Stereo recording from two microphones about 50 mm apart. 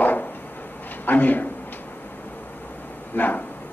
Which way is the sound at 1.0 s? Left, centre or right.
Left.